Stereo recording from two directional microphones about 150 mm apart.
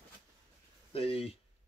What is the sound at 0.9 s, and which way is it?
Speech, 40° left (ahead or behind).